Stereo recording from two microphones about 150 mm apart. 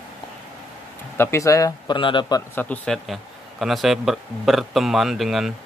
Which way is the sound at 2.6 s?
10° left (ahead or behind).